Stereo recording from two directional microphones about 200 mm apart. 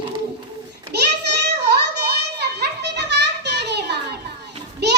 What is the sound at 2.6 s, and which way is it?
Children playing, 60° right (ahead or behind).